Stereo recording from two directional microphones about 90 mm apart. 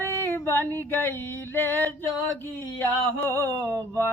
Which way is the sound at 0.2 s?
20° left (ahead or behind).